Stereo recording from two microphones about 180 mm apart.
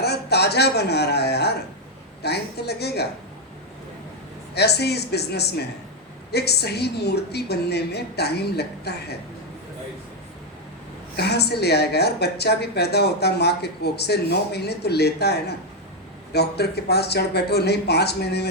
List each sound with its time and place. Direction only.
0.0 s speech: 65° left (ahead or behind)
4.5 s speech: 65° left (ahead or behind)
11.2 s speech: 65° left (ahead or behind)